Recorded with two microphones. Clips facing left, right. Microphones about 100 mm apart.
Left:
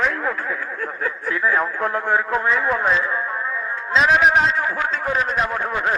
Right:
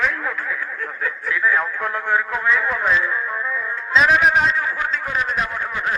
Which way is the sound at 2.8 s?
25° left (ahead or behind).